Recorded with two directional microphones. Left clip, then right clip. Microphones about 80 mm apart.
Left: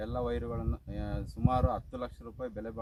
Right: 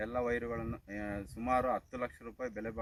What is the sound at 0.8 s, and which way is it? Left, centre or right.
Speech, centre.